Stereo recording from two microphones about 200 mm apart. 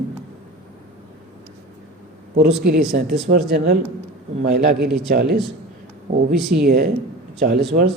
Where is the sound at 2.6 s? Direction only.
50° right (ahead or behind).